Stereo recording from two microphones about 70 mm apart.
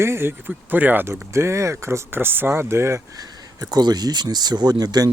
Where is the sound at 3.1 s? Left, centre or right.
Right.